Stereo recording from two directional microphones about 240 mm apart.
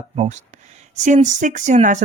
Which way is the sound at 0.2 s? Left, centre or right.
Right.